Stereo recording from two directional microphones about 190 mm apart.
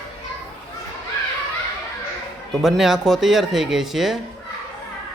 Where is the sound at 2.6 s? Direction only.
Centre (ahead or behind).